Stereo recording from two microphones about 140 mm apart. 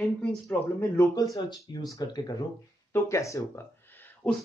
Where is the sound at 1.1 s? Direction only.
30° left (ahead or behind).